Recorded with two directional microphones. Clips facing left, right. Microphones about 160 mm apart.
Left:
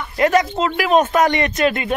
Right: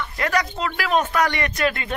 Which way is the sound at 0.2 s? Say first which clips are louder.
Left 8 dB; 20° left (ahead or behind).